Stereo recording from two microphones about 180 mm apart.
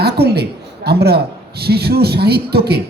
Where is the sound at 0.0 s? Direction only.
65° right (ahead or behind).